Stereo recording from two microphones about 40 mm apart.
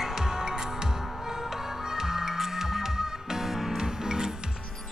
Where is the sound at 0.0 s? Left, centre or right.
Centre.